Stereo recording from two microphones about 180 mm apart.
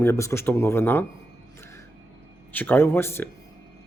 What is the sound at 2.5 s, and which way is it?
Speech, 10° left (ahead or behind).